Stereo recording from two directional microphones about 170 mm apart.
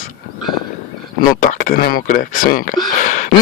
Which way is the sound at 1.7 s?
60° left (ahead or behind).